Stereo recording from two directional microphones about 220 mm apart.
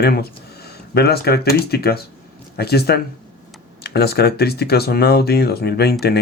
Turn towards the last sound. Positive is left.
turn(degrees=45)  # may be behind; listen again after turning